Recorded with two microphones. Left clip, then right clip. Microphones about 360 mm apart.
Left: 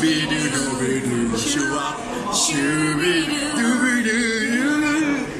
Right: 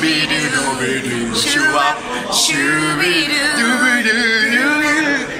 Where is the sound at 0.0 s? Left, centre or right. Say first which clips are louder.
Right 5 dB; right.